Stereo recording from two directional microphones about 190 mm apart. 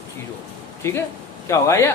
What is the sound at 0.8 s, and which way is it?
Speech, 15° left (ahead or behind).